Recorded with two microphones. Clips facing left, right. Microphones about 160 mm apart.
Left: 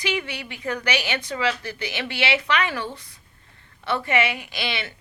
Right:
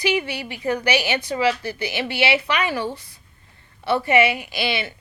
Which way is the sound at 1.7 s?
10° right (ahead or behind).